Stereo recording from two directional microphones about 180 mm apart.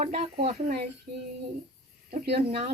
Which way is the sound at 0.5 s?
55° right (ahead or behind).